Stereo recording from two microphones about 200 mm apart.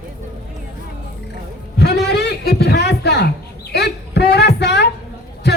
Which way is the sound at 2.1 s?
55° left (ahead or behind).